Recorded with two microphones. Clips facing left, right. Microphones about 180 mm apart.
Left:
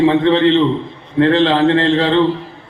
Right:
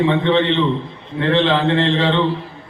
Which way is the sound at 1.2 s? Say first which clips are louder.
Left 5 dB; 40° left (ahead or behind).